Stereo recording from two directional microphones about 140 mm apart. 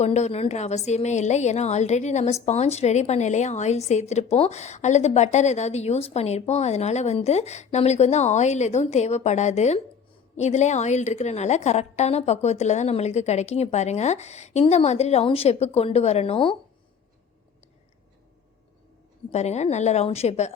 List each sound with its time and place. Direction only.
0.0 s a woman's voice: 50° left (ahead or behind)
19.3 s a woman's voice: 55° left (ahead or behind)